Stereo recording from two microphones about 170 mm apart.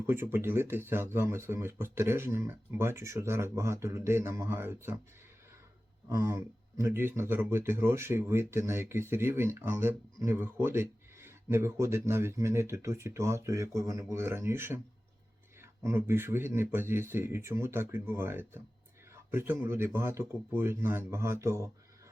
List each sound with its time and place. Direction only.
0.0 s speech: 15° right (ahead or behind)
6.1 s speech: 15° right (ahead or behind)
15.8 s speech: 15° right (ahead or behind)